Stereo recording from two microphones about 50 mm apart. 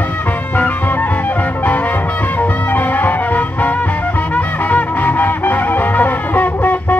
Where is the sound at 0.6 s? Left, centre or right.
Left.